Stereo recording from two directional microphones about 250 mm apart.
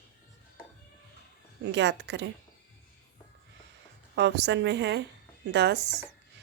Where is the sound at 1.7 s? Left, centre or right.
Right.